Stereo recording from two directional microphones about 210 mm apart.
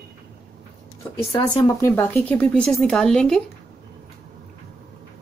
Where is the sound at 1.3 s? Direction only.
15° left (ahead or behind); by 3.4 s centre (ahead or behind).